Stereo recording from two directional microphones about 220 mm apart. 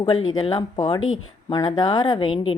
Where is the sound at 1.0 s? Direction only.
65° left (ahead or behind).